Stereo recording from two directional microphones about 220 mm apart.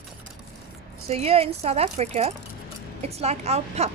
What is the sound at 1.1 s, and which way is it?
A woman's voice, 30° right (ahead or behind).